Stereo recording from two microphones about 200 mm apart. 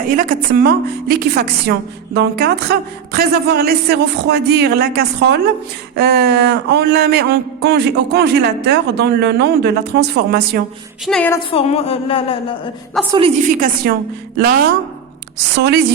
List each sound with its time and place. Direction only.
0.1 s a woman's voice: 45° right (ahead or behind)
11.0 s a woman's voice: 5° left (ahead or behind)
11.5 s speech: 30° left (ahead or behind)
13.1 s a woman's voice: 25° right (ahead or behind)
15.5 s speech: 55° right (ahead or behind)